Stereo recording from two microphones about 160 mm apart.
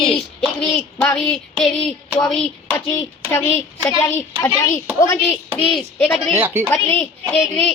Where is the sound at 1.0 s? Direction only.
15° left (ahead or behind).